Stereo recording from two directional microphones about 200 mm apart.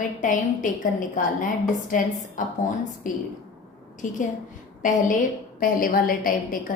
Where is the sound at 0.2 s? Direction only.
40° left (ahead or behind).